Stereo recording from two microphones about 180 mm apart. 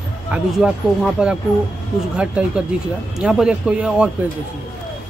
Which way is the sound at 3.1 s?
5° right (ahead or behind).